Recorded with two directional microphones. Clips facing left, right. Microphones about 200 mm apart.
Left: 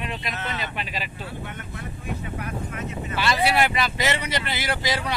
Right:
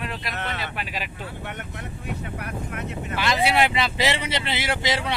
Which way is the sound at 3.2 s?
20° right (ahead or behind).